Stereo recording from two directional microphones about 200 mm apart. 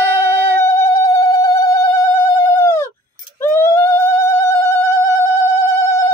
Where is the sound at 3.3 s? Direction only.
15° left (ahead or behind).